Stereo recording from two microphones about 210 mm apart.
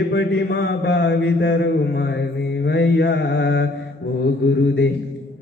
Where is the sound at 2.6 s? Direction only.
50° left (ahead or behind).